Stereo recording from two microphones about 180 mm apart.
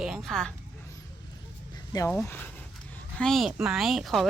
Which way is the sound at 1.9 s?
20° left (ahead or behind).